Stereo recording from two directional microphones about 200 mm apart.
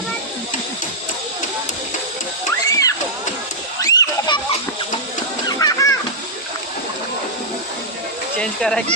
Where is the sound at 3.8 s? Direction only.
20° left (ahead or behind).